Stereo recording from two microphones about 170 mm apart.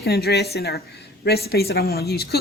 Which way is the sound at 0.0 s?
70° left (ahead or behind).